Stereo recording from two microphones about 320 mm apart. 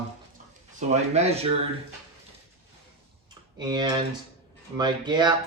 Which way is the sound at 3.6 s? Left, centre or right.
Centre.